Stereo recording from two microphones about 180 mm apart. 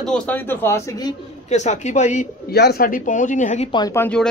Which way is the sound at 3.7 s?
15° left (ahead or behind).